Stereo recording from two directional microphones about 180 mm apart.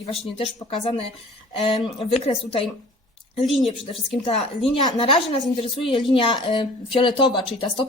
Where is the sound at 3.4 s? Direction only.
Centre (ahead or behind).